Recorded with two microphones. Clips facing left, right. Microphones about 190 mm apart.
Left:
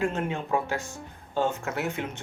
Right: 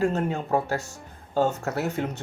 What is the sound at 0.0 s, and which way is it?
Speech, 40° right (ahead or behind).